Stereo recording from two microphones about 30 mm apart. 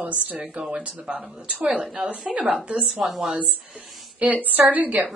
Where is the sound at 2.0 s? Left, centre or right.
Right.